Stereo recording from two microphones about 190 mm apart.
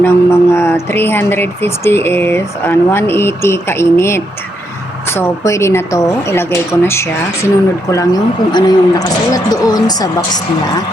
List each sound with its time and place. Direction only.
0.0 s a woman's voice: 15° left (ahead or behind)